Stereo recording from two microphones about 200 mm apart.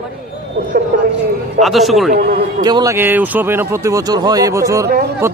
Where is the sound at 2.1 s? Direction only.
50° right (ahead or behind).